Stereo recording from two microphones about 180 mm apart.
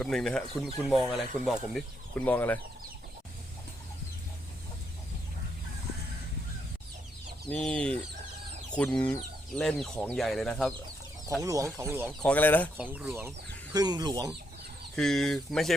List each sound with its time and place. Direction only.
0.0 s speech: 5° left (ahead or behind)
2.1 s speech: 10° left (ahead or behind)
7.5 s speech: 5° left (ahead or behind)
8.7 s chicken: 5° left (ahead or behind)
9.6 s speech: 5° left (ahead or behind)
11.4 s speech: 15° right (ahead or behind)
12.2 s speech: 10° left (ahead or behind)
12.7 s speech: 10° right (ahead or behind)
13.7 s speech: 25° right (ahead or behind)
14.9 s speech: centre (ahead or behind)